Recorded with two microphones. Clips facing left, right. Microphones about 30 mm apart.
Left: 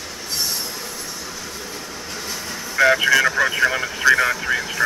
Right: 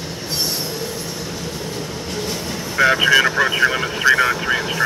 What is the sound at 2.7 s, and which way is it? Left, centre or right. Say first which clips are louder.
Speech: right 1 dB; centre.